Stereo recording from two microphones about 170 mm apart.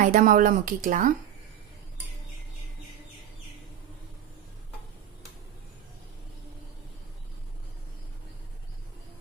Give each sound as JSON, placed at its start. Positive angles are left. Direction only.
{"t": 0.0, "sound": "speech", "side_deg": -50}